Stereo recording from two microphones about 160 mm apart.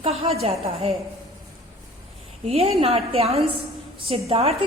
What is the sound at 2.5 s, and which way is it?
A woman's voice, 40° right (ahead or behind).